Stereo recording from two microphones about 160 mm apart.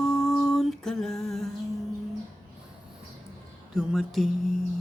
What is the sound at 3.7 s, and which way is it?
Speech, centre (ahead or behind).